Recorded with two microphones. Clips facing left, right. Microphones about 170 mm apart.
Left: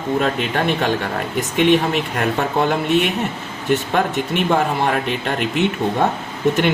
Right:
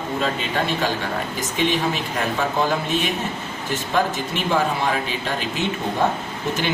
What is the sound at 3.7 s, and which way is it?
Speech, 65° left (ahead or behind).